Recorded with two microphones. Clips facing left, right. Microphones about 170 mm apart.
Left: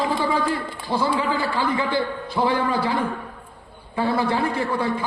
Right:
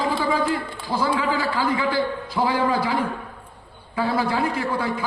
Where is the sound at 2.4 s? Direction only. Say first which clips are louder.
Left 1 dB; 10° left (ahead or behind).